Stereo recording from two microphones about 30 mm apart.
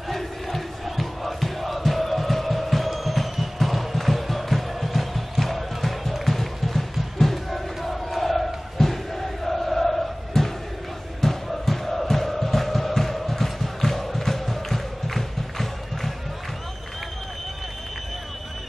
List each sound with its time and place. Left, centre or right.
0.1 s crowd: centre
11.1 s music: centre